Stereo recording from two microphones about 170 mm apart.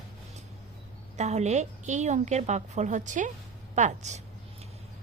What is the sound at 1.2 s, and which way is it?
A woman's voice, 40° right (ahead or behind).